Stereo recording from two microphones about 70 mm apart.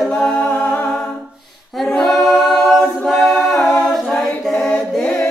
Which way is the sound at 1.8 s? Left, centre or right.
Centre.